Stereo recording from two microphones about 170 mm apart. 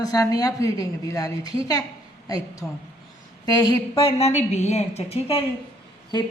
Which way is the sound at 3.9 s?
35° left (ahead or behind).